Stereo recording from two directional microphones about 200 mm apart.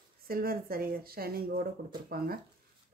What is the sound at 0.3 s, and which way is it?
Speech, 50° right (ahead or behind).